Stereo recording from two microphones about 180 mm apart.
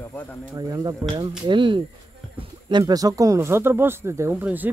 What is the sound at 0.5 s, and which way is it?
Speech, 20° right (ahead or behind).